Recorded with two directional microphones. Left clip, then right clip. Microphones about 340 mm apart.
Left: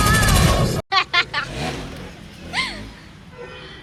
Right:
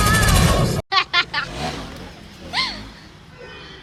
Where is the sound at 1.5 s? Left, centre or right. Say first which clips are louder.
Even; right.